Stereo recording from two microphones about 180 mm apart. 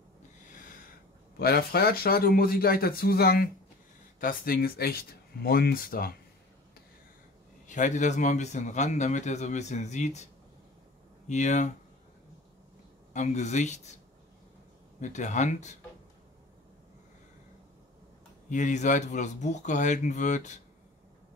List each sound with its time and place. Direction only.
0.5 s a sound: 45° left (ahead or behind)
1.4 s speech: 60° left (ahead or behind)
7.6 s speech: 45° left (ahead or behind)
11.2 s speech: 40° left (ahead or behind)
13.1 s speech: 40° left (ahead or behind)
15.0 s speech: 40° left (ahead or behind)
18.5 s speech: 40° left (ahead or behind)